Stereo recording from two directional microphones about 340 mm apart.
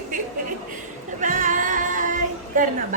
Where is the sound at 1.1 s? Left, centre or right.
Right.